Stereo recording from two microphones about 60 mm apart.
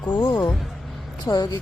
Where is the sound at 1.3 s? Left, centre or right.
Left.